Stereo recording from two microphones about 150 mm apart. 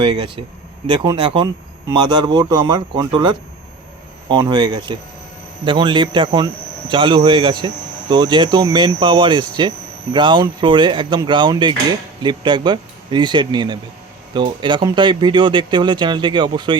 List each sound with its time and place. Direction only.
0.0 s speech: 35° right (ahead or behind)